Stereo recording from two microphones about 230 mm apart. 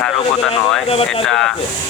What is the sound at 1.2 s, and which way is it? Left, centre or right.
Speech, centre.